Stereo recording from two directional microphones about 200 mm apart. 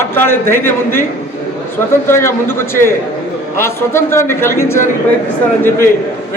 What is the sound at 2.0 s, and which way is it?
A man's voice, 10° left (ahead or behind).